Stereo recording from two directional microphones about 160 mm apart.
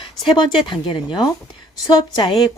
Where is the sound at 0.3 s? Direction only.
30° left (ahead or behind).